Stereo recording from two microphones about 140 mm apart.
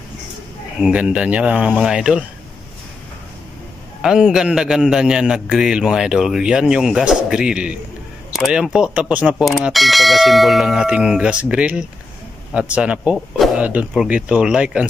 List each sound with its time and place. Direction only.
0.7 s a man's voice: 5° right (ahead or behind)
4.0 s a man's voice: 5° right (ahead or behind)